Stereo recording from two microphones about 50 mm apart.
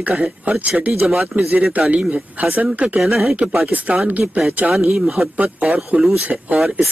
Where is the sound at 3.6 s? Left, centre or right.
Right.